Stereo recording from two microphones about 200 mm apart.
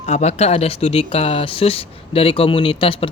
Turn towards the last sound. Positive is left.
turn(degrees=25)  # may be behind; listen again after turning